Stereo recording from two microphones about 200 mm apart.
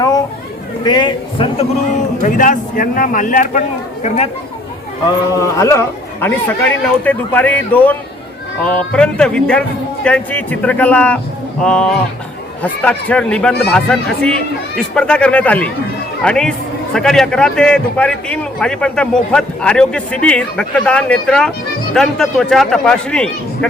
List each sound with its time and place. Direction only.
0.9 s a man's voice: 20° left (ahead or behind)
2.2 s a man's voice: 40° left (ahead or behind)
5.4 s a man's voice: 15° left (ahead or behind)